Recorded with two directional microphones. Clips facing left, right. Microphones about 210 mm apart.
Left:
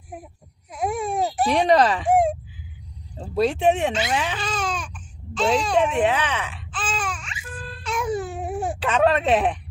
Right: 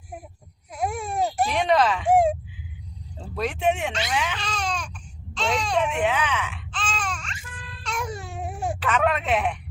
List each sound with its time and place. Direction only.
0.7 s baby cry: centre (ahead or behind)
1.5 s speech: 35° left (ahead or behind)
2.0 s a sound: centre (ahead or behind)
3.3 s speech: 30° left (ahead or behind)
4.4 s baby cry: centre (ahead or behind)
5.9 s speech: 35° left (ahead or behind)
6.7 s babbling: 5° left (ahead or behind)
7.9 s baby cry: centre (ahead or behind)
8.8 s speech: 30° left (ahead or behind)